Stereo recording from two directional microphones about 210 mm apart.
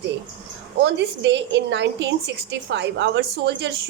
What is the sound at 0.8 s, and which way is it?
A woman's voice, 55° right (ahead or behind).